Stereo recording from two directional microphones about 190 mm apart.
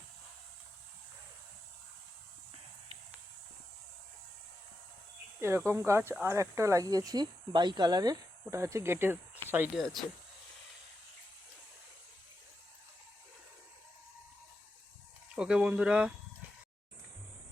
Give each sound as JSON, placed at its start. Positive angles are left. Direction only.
{"t": 5.4, "sound": "speech", "side_deg": -15}
{"t": 9.8, "sound": "speech", "side_deg": 0}
{"t": 15.4, "sound": "speech", "side_deg": -5}